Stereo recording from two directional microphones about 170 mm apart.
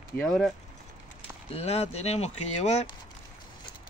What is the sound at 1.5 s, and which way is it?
Speech, 35° left (ahead or behind).